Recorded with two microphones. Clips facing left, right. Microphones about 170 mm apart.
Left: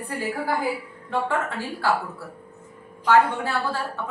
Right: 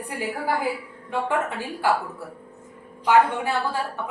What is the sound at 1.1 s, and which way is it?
Speech, 15° right (ahead or behind).